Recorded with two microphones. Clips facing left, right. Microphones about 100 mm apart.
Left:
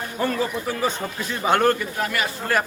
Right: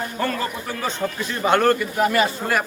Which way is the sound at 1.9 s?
25° right (ahead or behind).